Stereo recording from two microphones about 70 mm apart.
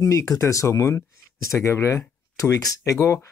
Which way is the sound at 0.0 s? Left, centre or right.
Left.